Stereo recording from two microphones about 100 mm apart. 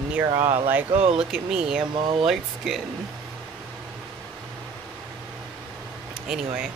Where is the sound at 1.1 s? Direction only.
10° right (ahead or behind).